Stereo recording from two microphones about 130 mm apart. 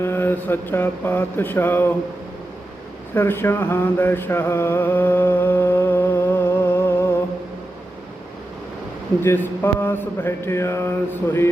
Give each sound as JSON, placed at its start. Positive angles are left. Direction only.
{"t": 0.0, "sound": "mantra", "side_deg": 15}
{"t": 3.2, "sound": "mantra", "side_deg": 15}
{"t": 9.2, "sound": "mantra", "side_deg": 15}